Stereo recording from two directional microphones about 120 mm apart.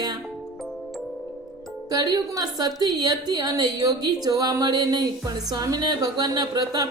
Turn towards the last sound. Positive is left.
turn(degrees=-35)  # may be behind; listen again after turning